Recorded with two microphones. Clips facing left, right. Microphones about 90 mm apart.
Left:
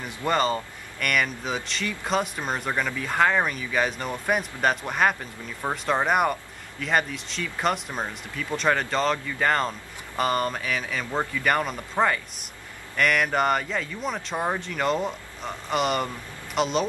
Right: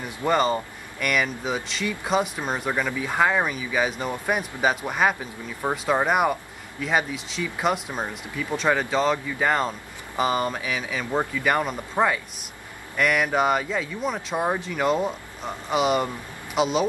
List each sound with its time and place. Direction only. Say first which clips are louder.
0.2 s speech: right 2 dB; 10° right (ahead or behind)